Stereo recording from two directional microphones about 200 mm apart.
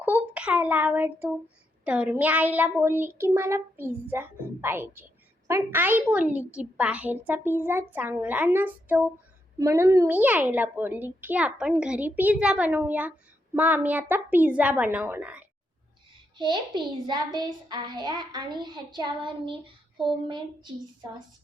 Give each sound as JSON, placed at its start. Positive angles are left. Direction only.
{"t": 0.0, "sound": "a sound", "side_deg": -5}
{"t": 1.8, "sound": "a child's voice", "side_deg": -5}
{"t": 16.4, "sound": "a woman's voice", "side_deg": -25}